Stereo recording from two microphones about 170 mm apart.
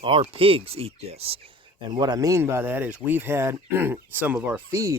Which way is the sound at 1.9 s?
25° right (ahead or behind).